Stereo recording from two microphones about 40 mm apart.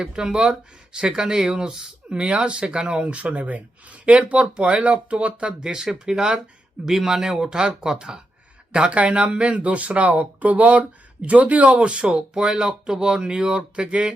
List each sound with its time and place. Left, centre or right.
0.0 s speech: centre
5.6 s speech: centre
6.8 s speech: centre
7.3 s speech: centre
12.0 s speech: right